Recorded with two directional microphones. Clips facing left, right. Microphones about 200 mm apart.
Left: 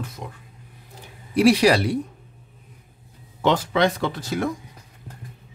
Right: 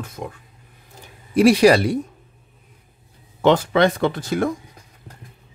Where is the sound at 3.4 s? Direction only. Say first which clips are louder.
Right 4 dB; 55° right (ahead or behind).